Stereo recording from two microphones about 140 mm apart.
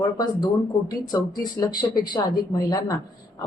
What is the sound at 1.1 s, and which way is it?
A man's voice, 30° left (ahead or behind).